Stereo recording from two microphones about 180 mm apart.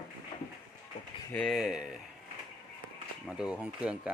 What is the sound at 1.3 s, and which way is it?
Speech, centre (ahead or behind).